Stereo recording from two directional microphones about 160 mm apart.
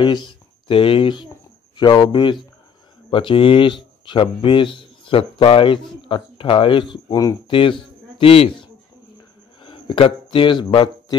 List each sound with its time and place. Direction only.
0.0 s a man's voice: 30° left (ahead or behind)